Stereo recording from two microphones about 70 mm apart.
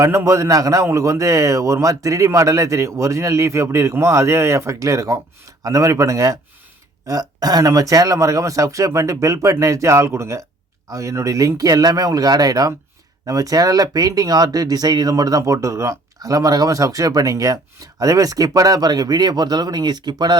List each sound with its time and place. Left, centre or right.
0.3 s speech: right
7.1 s speech: right